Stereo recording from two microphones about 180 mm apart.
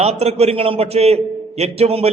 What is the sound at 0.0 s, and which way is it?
A man's voice, 35° right (ahead or behind).